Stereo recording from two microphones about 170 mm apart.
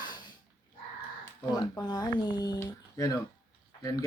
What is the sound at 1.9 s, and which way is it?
Speech, 25° left (ahead or behind).